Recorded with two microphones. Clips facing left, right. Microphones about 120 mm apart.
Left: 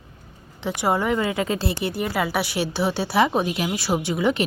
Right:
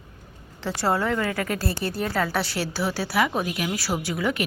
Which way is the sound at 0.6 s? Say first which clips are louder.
Left 2 dB; 15° left (ahead or behind).